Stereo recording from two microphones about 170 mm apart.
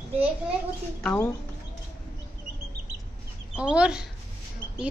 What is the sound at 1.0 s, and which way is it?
Speech, 10° left (ahead or behind).